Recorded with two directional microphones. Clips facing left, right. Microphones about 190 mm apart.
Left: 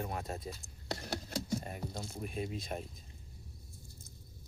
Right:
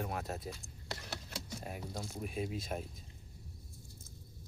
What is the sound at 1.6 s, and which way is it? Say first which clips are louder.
Speech: left 1 dB; 5° right (ahead or behind).